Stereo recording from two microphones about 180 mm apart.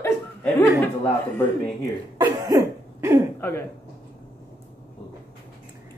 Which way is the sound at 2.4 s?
15° right (ahead or behind).